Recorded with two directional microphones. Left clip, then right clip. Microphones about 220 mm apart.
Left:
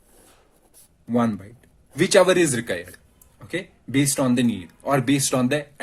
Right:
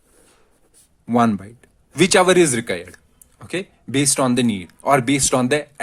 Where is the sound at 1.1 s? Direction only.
40° right (ahead or behind).